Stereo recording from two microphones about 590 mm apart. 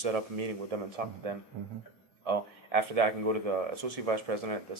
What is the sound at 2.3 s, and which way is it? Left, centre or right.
Speech, right.